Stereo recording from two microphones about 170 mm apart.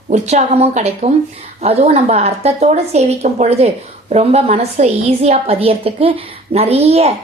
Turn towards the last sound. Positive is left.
turn(degrees=-35)  # may be behind; listen again after turning